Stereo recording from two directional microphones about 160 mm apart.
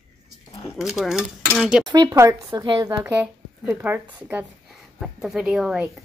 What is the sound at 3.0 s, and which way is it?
Speech, 10° right (ahead or behind).